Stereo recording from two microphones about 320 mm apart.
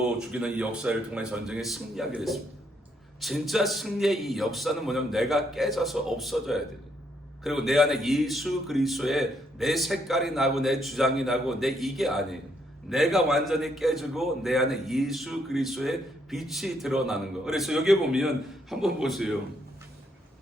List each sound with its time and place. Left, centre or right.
0.2 s a man's voice: centre